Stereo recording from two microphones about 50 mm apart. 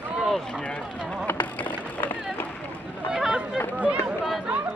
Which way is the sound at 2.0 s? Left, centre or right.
Left.